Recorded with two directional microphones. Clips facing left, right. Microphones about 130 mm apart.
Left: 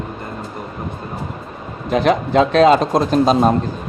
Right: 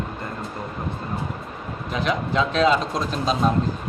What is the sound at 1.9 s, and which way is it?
Speech, 60° left (ahead or behind).